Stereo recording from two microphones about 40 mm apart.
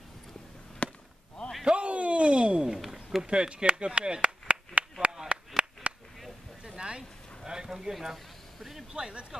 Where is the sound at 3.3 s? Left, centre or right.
Right.